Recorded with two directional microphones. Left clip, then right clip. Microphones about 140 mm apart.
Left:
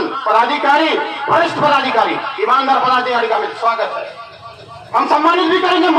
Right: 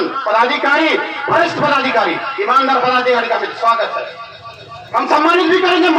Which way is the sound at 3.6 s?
30° left (ahead or behind).